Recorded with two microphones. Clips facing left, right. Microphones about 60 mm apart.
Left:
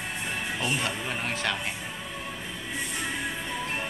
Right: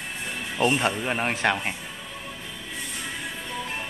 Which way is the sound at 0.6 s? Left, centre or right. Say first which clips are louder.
Right 10 dB; right.